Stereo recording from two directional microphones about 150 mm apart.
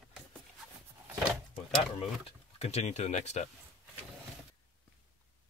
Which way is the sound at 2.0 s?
40° left (ahead or behind).